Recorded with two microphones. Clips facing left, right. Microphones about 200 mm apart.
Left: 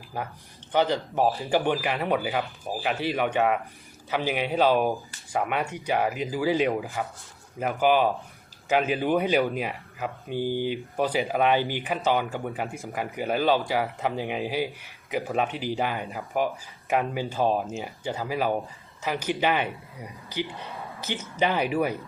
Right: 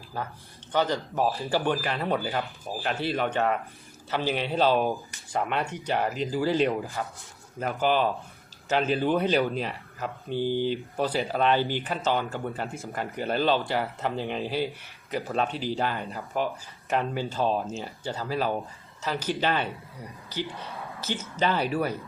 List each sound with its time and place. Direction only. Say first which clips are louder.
0.1 s speech: left 1 dB; 15° left (ahead or behind)